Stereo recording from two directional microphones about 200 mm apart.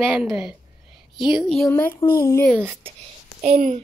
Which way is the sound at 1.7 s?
10° left (ahead or behind).